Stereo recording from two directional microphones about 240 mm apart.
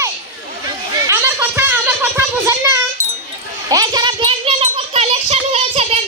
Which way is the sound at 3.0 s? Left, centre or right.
Left.